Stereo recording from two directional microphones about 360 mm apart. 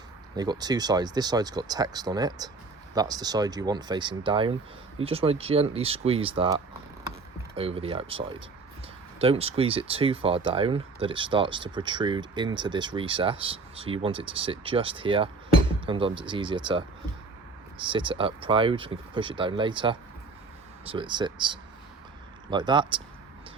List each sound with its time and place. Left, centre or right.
0.3 s speech: centre
17.8 s speech: centre